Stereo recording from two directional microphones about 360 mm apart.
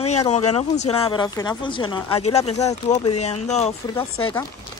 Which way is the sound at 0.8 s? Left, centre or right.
Centre.